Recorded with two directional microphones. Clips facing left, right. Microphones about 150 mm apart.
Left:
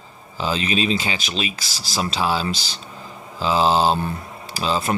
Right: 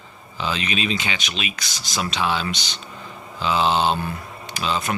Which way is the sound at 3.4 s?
35° left (ahead or behind).